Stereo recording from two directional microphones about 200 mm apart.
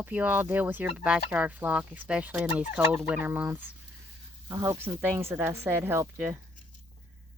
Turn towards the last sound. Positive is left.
turn(degrees=-10)  # may be behind; listen again after turning